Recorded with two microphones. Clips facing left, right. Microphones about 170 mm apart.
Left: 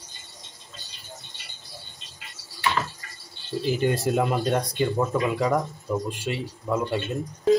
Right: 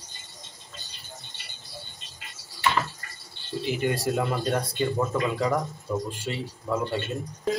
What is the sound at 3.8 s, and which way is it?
Speech, 20° left (ahead or behind).